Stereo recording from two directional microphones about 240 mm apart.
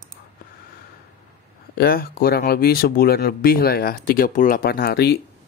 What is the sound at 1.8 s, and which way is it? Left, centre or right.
Speech, left.